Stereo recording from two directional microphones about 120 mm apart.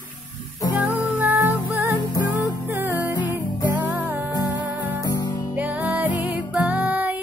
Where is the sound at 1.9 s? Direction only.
30° left (ahead or behind).